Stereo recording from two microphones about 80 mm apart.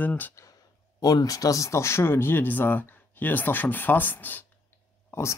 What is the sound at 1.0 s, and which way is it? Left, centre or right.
Speech, left.